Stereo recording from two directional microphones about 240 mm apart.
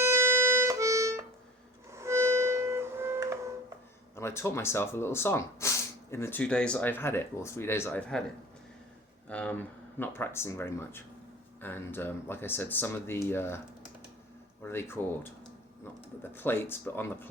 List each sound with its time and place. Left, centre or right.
0.0 s music: centre
4.1 s speech: centre
9.3 s speech: centre
14.6 s speech: centre
16.3 s speech: centre